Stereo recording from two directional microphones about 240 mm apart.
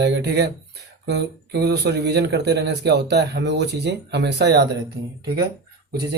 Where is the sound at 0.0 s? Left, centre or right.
Right.